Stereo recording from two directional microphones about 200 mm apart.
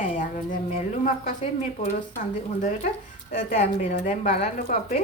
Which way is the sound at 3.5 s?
35° left (ahead or behind).